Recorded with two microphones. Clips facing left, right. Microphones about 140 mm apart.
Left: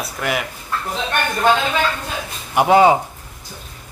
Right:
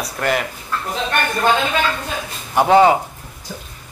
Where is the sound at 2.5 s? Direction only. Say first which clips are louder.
Even; 10° left (ahead or behind).